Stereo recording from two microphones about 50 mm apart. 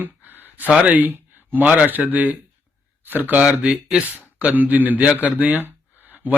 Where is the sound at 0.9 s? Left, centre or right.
Right.